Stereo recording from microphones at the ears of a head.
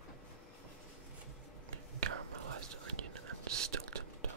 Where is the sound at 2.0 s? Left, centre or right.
Right.